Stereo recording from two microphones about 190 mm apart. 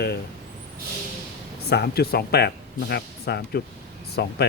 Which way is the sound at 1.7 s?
55° left (ahead or behind).